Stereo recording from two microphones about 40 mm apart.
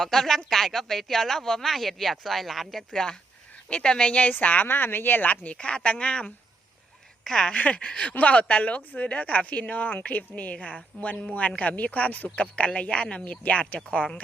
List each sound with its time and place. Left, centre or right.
0.0 s speech: centre
2.9 s speech: centre
4.1 s speech: left
4.7 s speech: left
5.3 s speech: left
5.5 s speech: left
7.3 s speech: centre
7.5 s speech: left